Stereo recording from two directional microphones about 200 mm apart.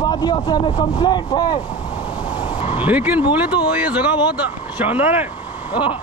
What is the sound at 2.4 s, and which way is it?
Vehicle, 25° left (ahead or behind).